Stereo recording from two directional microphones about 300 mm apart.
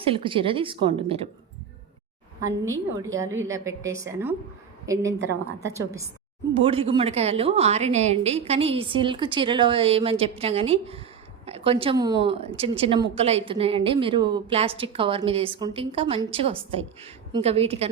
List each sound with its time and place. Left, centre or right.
0.0 s a woman's voice: centre
2.4 s a woman's voice: centre
5.5 s a woman's voice: centre